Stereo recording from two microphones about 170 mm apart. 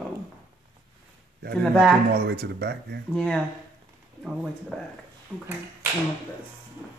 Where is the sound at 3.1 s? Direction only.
5° left (ahead or behind).